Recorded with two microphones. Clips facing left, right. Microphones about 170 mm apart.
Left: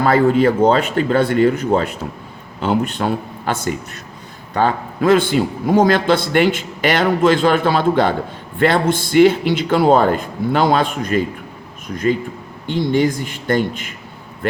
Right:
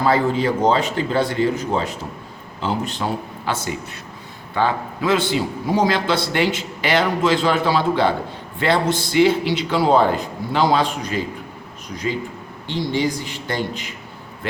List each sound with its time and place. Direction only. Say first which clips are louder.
0.0 s a man's voice: left 5 dB; 55° left (ahead or behind)
12.6 s a man's voice: left 5 dB; 50° left (ahead or behind)